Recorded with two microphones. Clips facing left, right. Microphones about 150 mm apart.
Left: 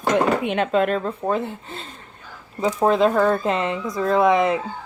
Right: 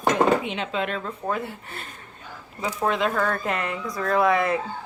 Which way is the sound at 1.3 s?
25° left (ahead or behind).